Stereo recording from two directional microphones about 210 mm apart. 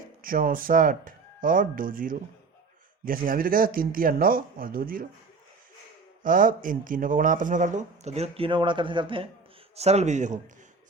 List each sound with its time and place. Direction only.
0.2 s speech: 40° right (ahead or behind)
6.2 s speech: 40° right (ahead or behind)